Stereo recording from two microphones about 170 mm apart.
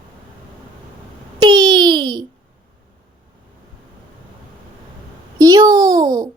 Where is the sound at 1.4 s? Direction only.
25° right (ahead or behind).